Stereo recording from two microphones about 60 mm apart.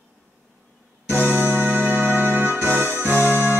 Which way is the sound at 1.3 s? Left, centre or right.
Right.